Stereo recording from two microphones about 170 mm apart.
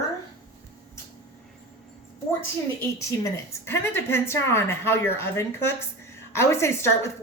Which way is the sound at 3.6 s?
15° left (ahead or behind).